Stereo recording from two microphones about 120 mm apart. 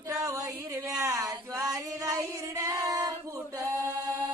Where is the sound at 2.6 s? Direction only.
30° right (ahead or behind).